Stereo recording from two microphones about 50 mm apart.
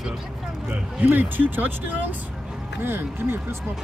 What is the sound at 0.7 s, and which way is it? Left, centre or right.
Speech, right.